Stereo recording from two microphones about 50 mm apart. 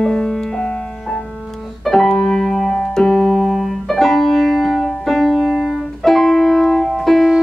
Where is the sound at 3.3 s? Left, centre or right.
Centre.